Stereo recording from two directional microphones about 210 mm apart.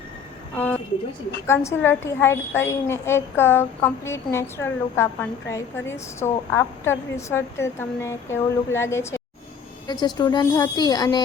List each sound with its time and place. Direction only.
0.5 s a woman's voice: 5° left (ahead or behind)